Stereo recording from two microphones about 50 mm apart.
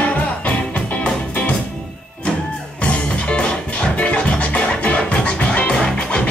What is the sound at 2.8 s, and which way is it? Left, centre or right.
Music, left.